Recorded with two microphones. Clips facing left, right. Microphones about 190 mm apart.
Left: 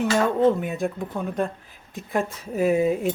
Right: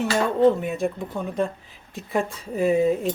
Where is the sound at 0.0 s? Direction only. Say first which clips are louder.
Right 1 dB; centre (ahead or behind).